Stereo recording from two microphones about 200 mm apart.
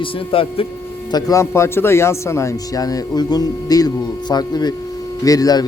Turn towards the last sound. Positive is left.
turn(degrees=20)  # may be behind; listen again after turning